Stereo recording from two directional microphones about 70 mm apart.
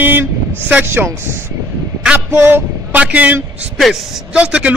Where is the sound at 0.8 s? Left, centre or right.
Right.